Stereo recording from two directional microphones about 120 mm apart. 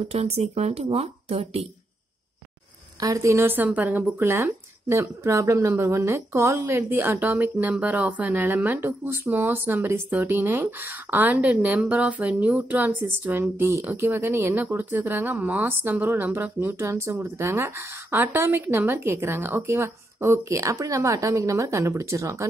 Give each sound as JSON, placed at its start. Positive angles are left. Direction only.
{"t": 0.1, "sound": "speech", "side_deg": -60}
{"t": 3.0, "sound": "speech", "side_deg": -25}